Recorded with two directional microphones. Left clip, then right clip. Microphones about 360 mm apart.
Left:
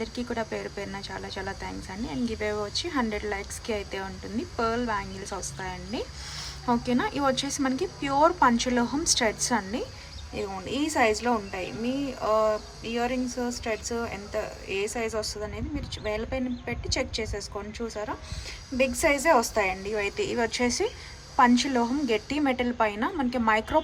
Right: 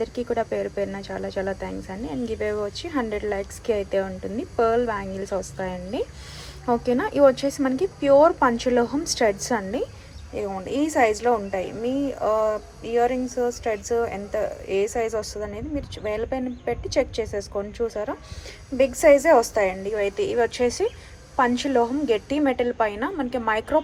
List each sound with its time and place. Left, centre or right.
0.0 s speech: centre